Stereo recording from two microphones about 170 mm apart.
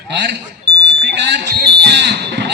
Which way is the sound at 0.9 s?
90° right.